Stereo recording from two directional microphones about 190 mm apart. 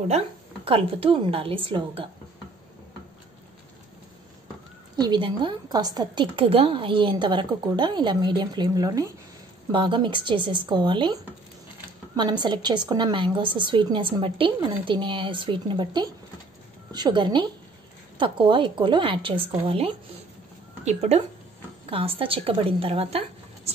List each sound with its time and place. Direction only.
0.7 s a woman's voice: 30° right (ahead or behind)
4.9 s a woman's voice: 20° right (ahead or behind)
12.2 s a woman's voice: 25° right (ahead or behind)